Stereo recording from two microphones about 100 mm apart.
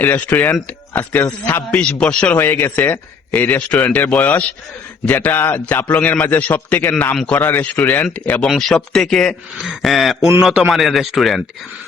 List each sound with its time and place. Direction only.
0.0 s a man's voice: 15° left (ahead or behind); by 11.4 s centre (ahead or behind)